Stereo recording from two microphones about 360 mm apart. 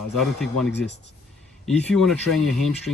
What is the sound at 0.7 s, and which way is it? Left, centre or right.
Speech, left.